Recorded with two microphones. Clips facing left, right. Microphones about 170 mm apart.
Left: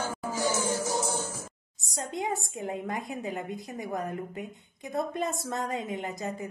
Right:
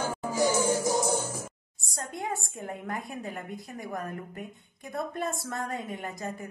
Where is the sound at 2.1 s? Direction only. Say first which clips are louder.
Left 3 dB; 20° left (ahead or behind).